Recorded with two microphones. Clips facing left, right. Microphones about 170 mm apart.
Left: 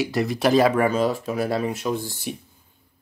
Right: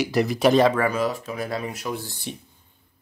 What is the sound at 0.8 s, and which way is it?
Speech, 25° left (ahead or behind).